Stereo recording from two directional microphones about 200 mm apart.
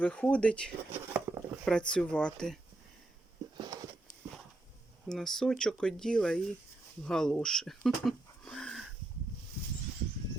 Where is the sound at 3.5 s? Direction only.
20° right (ahead or behind).